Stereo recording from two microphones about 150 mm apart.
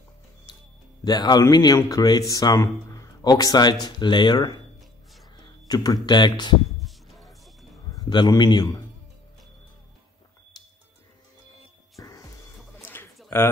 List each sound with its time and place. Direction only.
1.0 s a man's voice: 25° left (ahead or behind)
5.4 s a sound: 25° left (ahead or behind)
6.0 s a man's voice: 30° left (ahead or behind)
6.8 s a sound: centre (ahead or behind)
7.9 s a man's voice: 30° left (ahead or behind)
12.0 s music: 20° left (ahead or behind)
12.8 s bird: 15° left (ahead or behind)
13.3 s speech: 15° left (ahead or behind)